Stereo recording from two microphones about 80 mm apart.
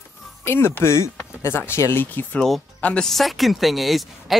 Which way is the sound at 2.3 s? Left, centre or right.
Centre.